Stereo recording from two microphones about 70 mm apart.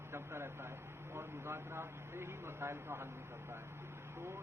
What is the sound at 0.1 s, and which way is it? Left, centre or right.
A man's voice, right.